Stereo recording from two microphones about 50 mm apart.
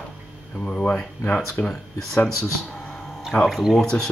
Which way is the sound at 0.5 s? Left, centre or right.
Left.